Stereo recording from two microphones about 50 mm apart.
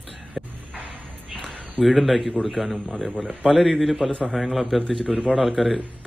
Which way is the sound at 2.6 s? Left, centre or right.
Left.